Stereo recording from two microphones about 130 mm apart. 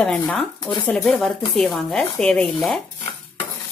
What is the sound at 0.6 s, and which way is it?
Speech, 40° left (ahead or behind).